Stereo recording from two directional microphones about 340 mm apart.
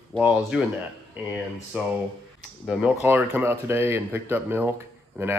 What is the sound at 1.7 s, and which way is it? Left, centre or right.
Speech, centre.